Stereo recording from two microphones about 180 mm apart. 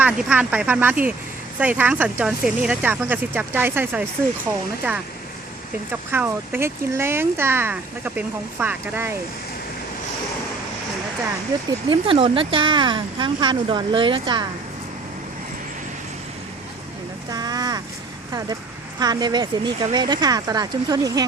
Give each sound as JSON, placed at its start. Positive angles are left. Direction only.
{"t": 0.0, "sound": "speech", "side_deg": -10}
{"t": 5.9, "sound": "speech", "side_deg": -10}
{"t": 11.9, "sound": "speech", "side_deg": -30}
{"t": 17.3, "sound": "speech", "side_deg": -20}